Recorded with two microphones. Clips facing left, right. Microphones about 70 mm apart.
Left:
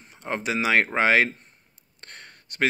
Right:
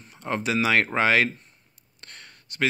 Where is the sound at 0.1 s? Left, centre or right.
Left.